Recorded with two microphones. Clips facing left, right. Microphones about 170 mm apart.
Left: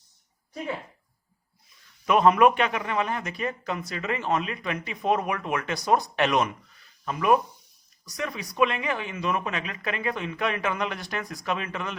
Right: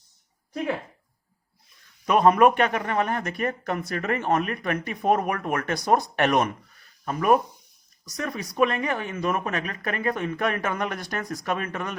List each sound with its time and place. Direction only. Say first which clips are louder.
2.0 s speech: right 1 dB; 40° right (ahead or behind)